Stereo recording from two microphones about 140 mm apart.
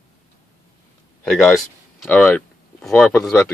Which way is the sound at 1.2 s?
Centre (ahead or behind).